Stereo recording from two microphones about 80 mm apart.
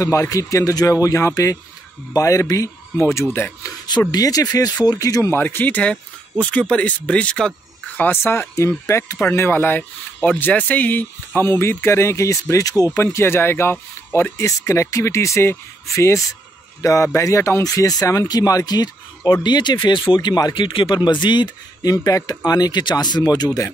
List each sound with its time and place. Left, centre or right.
0.0 s speech: left
3.3 s speech: centre
4.1 s speech: left
5.3 s speech: left
8.0 s speech: left
13.0 s speech: left
21.9 s speech: left